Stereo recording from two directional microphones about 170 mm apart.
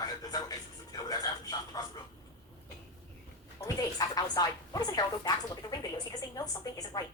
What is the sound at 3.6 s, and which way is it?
A woman's voice, 20° left (ahead or behind).